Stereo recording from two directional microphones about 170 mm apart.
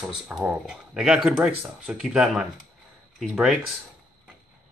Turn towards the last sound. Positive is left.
turn(degrees=-5)  # may be behind; listen again after turning